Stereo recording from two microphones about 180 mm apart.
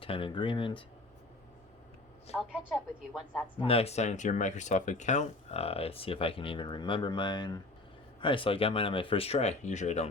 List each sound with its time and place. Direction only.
0.0 s speech: 30° left (ahead or behind)
2.3 s a woman's voice: 35° left (ahead or behind)
2.7 s a woman's voice: centre (ahead or behind)
3.6 s speech: 30° left (ahead or behind)